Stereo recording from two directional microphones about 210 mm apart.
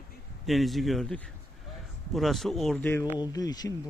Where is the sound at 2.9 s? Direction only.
10° left (ahead or behind).